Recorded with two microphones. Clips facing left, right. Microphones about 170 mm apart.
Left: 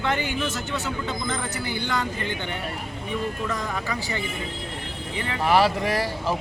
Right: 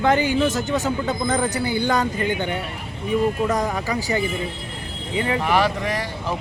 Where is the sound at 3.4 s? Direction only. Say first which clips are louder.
Right 7 dB; 40° right (ahead or behind).